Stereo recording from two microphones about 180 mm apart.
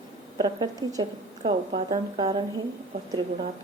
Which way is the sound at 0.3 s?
20° right (ahead or behind).